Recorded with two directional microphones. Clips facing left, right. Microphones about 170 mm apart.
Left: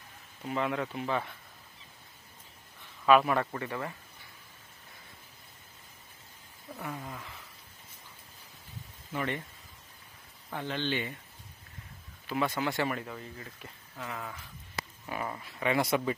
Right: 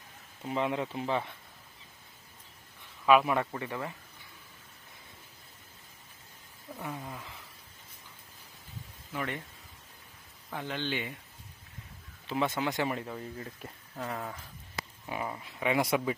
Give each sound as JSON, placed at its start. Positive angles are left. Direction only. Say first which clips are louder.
{"t": 0.4, "sound": "speech", "louder": "right 1 dB", "side_deg": -20}
{"t": 3.1, "sound": "speech", "louder": "even", "side_deg": -10}
{"t": 6.7, "sound": "speech", "louder": "even", "side_deg": -10}
{"t": 9.1, "sound": "speech", "louder": "left 2 dB", "side_deg": 0}
{"t": 10.5, "sound": "speech", "louder": "left 2 dB", "side_deg": -10}
{"t": 12.3, "sound": "speech", "louder": "even", "side_deg": -20}
{"t": 13.0, "sound": "speech", "louder": "right 2 dB", "side_deg": -25}
{"t": 13.9, "sound": "speech", "louder": "right 3 dB", "side_deg": -35}
{"t": 15.0, "sound": "speech", "louder": "right 1 dB", "side_deg": -15}